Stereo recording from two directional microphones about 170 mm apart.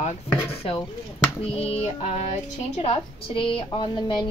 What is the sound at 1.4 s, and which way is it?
Speech, 35° left (ahead or behind).